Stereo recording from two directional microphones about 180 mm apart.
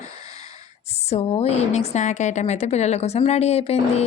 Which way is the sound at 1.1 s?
35° left (ahead or behind).